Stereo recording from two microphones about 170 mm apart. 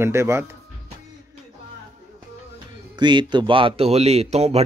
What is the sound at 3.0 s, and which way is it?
Speech, 25° right (ahead or behind).